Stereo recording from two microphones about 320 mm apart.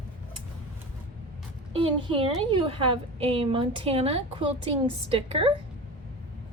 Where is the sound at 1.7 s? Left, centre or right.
Centre.